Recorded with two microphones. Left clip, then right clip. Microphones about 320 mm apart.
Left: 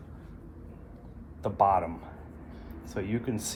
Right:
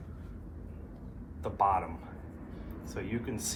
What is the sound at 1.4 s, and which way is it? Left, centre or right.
Speech, left.